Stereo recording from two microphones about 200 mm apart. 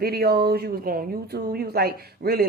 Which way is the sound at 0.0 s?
50° right (ahead or behind).